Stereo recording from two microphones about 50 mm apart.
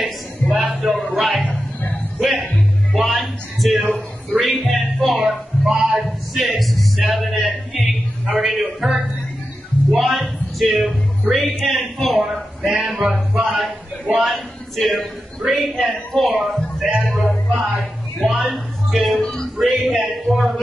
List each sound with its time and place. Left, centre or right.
0.5 s music: centre
4.3 s speech: centre
4.6 s music: centre
8.4 s a man's voice: centre
19.2 s speech: centre
19.6 s a man's voice: centre